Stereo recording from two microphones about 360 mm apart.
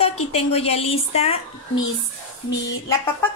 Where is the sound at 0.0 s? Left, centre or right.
Centre.